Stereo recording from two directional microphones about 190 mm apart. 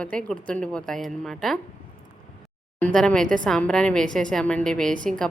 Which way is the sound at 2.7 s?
5° left (ahead or behind).